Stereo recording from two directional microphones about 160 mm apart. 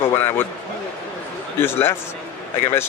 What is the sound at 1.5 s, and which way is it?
Speech, 15° left (ahead or behind).